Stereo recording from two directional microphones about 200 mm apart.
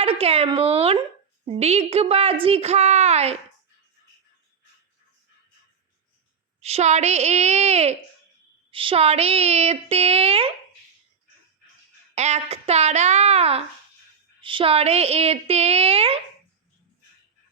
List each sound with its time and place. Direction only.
0.0 s a woman's voice: 30° right (ahead or behind)
6.6 s a woman's voice: 30° right (ahead or behind)
12.1 s a woman's voice: 35° right (ahead or behind)